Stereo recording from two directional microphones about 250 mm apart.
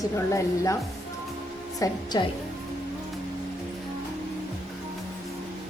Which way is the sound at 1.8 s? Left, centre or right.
Centre.